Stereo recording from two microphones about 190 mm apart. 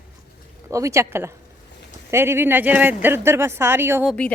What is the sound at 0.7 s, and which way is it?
A woman's voice, 15° right (ahead or behind).